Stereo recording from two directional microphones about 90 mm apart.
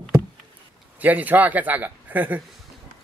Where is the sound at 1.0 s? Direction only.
20° right (ahead or behind).